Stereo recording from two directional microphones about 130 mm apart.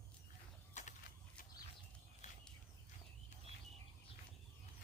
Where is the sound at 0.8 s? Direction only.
65° left (ahead or behind).